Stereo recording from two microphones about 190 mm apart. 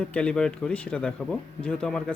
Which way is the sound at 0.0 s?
5° left (ahead or behind).